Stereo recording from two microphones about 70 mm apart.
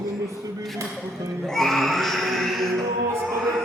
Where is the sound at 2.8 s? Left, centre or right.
Right.